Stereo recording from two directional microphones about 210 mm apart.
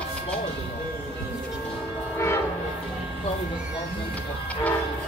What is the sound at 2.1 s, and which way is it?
Train, 15° left (ahead or behind).